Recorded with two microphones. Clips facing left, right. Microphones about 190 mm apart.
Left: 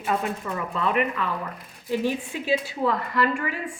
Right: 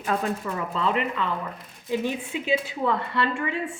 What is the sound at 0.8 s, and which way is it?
Speech, 25° right (ahead or behind).